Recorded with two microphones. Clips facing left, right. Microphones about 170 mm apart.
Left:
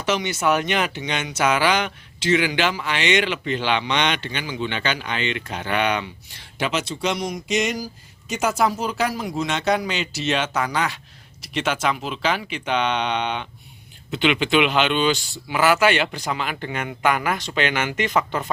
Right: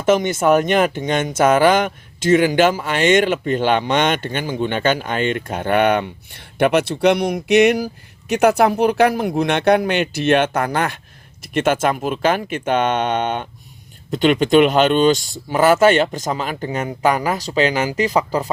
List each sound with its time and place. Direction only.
0.0 s speech: 50° right (ahead or behind)